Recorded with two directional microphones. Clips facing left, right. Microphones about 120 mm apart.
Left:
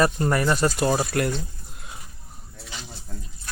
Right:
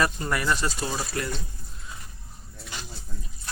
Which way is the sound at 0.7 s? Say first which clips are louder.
Left 8 dB; 55° left (ahead or behind).